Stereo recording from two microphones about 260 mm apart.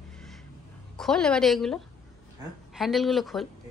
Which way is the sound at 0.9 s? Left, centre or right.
Centre.